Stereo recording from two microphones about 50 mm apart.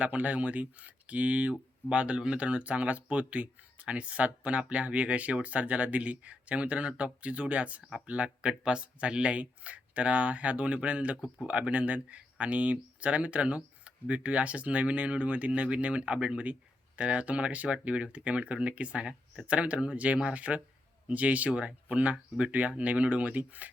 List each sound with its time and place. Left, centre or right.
0.0 s speech: right